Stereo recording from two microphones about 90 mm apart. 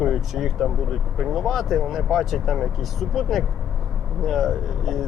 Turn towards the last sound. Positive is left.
turn(degrees=0)  # may be behind; listen again after turning